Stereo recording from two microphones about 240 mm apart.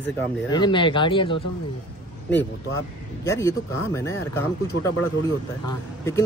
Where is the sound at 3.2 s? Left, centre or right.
Centre.